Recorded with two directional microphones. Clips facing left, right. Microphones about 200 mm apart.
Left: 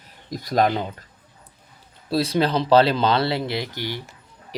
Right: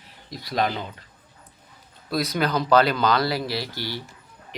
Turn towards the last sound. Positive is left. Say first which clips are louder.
# left 2 dB
turn(degrees=15)  # may be behind; listen again after turning